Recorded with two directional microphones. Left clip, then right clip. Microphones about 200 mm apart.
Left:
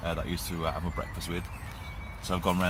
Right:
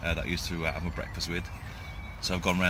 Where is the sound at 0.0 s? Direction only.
15° right (ahead or behind).